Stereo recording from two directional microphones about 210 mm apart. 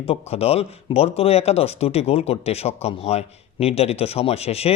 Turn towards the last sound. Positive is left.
turn(degrees=30)  # may be behind; listen again after turning